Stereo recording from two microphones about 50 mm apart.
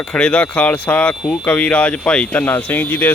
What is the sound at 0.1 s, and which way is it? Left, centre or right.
Speech, left.